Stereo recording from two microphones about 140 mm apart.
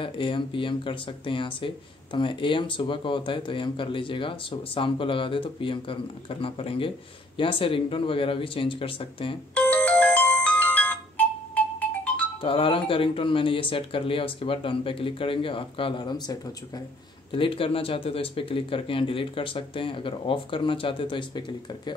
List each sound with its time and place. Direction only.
0.0 s speech: 35° left (ahead or behind)
9.5 s ringtone: 10° left (ahead or behind)
12.4 s speech: 40° left (ahead or behind)